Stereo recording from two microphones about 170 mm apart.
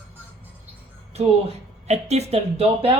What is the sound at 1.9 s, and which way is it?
Speech, 40° right (ahead or behind).